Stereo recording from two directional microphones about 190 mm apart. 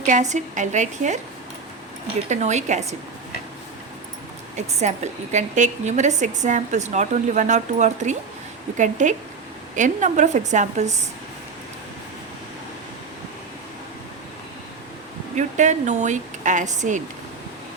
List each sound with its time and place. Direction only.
0.1 s a woman's voice: 40° right (ahead or behind)
2.3 s a woman's voice: 35° right (ahead or behind)
4.5 s a woman's voice: 35° right (ahead or behind)
15.4 s a woman's voice: 40° right (ahead or behind)